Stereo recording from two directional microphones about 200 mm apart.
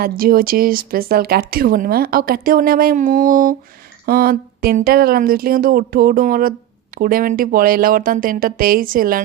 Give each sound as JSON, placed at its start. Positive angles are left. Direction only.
{"t": 0.0, "sound": "speech", "side_deg": -45}